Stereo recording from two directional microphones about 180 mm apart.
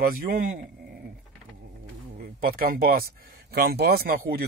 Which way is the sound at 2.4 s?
55° right (ahead or behind).